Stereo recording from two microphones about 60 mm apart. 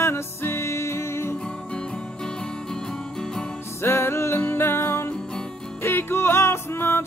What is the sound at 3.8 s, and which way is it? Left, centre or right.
Music, left.